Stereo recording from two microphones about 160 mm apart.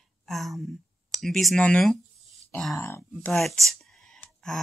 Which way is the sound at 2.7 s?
15° left (ahead or behind).